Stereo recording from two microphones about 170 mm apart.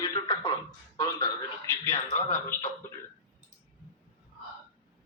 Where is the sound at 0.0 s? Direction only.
20° left (ahead or behind).